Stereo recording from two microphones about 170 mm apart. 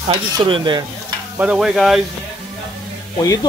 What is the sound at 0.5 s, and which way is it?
Speech, 25° right (ahead or behind).